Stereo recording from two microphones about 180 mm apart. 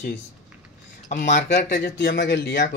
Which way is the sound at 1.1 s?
45° left (ahead or behind).